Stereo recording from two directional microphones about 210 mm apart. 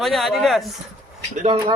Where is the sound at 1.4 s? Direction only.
30° right (ahead or behind).